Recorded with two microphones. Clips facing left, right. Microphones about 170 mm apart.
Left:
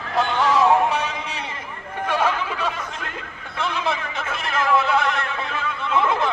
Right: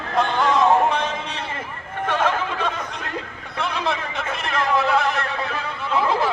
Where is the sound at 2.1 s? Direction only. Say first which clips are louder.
Even; 10° left (ahead or behind).